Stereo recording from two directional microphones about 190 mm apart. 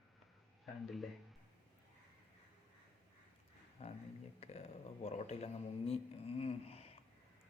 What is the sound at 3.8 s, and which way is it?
Speech, 35° left (ahead or behind).